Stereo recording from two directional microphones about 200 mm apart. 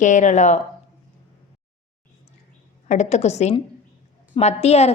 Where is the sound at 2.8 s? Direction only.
35° left (ahead or behind).